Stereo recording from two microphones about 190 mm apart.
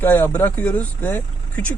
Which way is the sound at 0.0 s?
10° left (ahead or behind).